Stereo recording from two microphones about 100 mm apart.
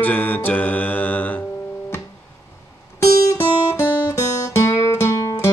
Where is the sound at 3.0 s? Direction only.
35° left (ahead or behind).